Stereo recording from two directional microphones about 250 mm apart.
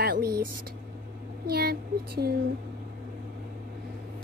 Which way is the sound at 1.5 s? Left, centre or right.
Right.